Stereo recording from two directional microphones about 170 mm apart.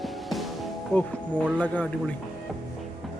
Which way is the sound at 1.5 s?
10° left (ahead or behind).